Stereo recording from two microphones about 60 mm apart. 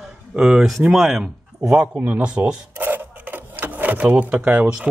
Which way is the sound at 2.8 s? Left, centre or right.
Right.